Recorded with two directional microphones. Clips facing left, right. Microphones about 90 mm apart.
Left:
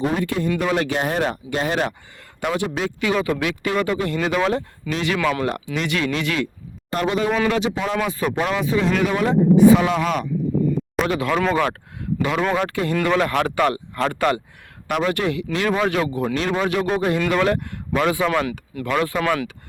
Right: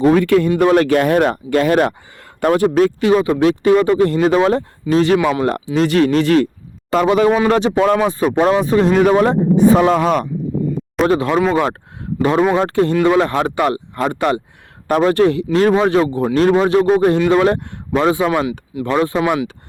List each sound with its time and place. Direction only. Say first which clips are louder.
0.0 s speech: right 10 dB; 80° right
0.6 s speech: right 9 dB; 50° right (ahead or behind)
3.0 s speech: right 8 dB; 35° right (ahead or behind)
5.2 s speech: right 5 dB; 25° right (ahead or behind)
5.5 s speech: right 8 dB; 40° right (ahead or behind)
6.9 s a man's voice: right 8 dB; 90° right
7.4 s speech: right 8 dB; 40° right (ahead or behind)
11.3 s speech: right 5 dB; 10° right (ahead or behind)
12.4 s speech: right 7 dB; 20° right (ahead or behind)
12.6 s speech: right 7 dB; 35° right (ahead or behind)
14.8 s speech: right 8 dB; 35° right (ahead or behind)
16.6 s speech: right 8 dB; 30° right (ahead or behind)